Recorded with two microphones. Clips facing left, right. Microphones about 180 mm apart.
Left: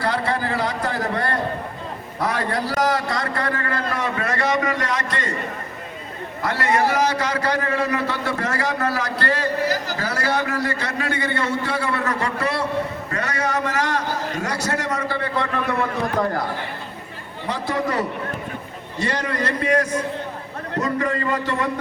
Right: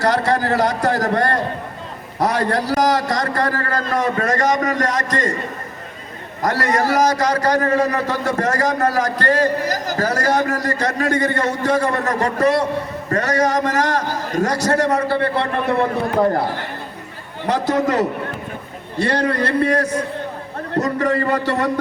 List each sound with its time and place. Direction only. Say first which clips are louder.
0.0 s a man's voice: right 5 dB; 40° right (ahead or behind)
6.4 s a man's voice: right 2 dB; 40° right (ahead or behind)
17.7 s a man's voice: right 4 dB; 45° right (ahead or behind)
18.9 s a man's voice: right 5 dB; 60° right (ahead or behind)
19.2 s a man's voice: right 6 dB; 30° right (ahead or behind)